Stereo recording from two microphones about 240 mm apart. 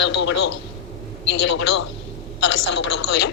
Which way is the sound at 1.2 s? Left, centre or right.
Left.